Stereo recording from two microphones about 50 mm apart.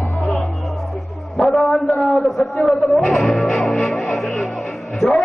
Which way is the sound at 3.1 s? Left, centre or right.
Centre.